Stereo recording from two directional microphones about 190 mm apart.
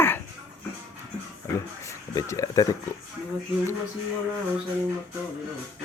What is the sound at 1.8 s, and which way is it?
Speech, 15° left (ahead or behind).